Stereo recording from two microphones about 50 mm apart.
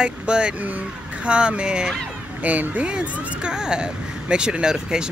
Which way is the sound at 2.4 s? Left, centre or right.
Right.